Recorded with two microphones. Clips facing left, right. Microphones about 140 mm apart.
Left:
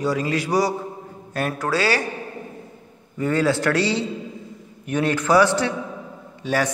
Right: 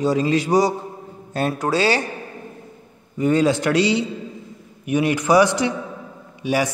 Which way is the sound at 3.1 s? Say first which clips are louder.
Right 3 dB; 20° right (ahead or behind).